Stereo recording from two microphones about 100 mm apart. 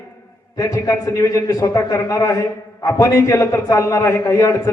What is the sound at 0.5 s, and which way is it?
A man's voice, 35° left (ahead or behind).